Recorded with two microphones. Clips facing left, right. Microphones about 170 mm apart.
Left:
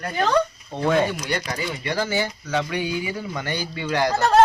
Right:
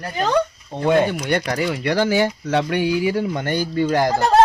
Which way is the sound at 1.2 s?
60° right (ahead or behind).